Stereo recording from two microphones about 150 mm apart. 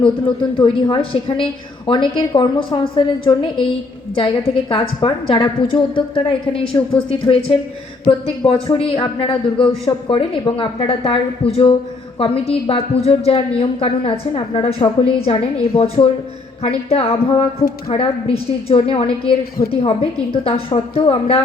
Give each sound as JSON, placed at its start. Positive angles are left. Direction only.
{"t": 0.0, "sound": "a woman's voice", "side_deg": 30}